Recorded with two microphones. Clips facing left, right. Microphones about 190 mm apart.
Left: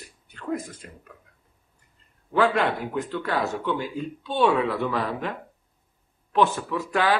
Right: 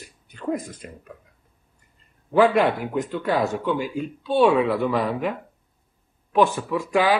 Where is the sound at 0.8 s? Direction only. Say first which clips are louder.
Right 5 dB; 15° right (ahead or behind).